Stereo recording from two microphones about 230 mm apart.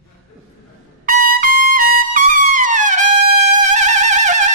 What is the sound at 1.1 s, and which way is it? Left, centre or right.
Trumpet, right.